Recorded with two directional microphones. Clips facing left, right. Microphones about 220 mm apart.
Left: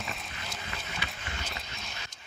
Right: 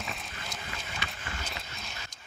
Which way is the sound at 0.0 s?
Centre (ahead or behind).